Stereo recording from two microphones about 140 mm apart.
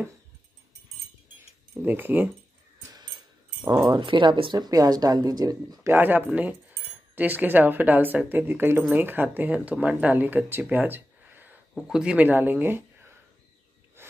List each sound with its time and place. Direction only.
1.8 s speech: 15° right (ahead or behind)
3.6 s speech: 30° right (ahead or behind)
5.9 s speech: 15° right (ahead or behind)